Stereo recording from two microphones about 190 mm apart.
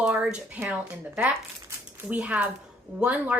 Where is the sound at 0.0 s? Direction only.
5° right (ahead or behind).